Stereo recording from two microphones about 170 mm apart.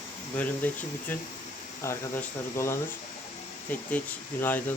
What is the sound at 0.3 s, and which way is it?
Speech, 10° left (ahead or behind).